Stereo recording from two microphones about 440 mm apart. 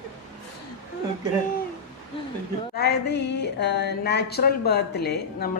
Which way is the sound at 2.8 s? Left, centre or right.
Left.